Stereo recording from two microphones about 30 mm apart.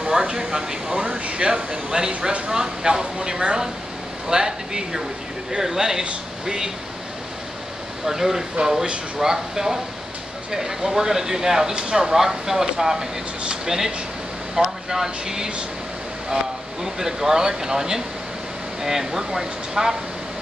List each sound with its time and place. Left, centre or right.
0.0 s speech: right
1.0 s speech: right; by 6.7 s centre
8.0 s speech: centre
16.8 s speech: centre